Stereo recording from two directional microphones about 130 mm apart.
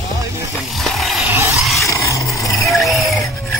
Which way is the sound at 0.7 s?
Centre (ahead or behind).